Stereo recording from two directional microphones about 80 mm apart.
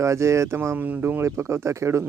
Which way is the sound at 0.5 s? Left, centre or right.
Right.